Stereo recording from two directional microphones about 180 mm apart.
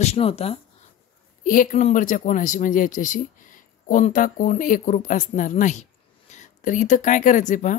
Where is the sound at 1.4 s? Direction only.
50° left (ahead or behind).